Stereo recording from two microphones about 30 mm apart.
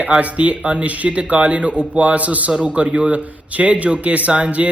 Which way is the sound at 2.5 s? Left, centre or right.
Right.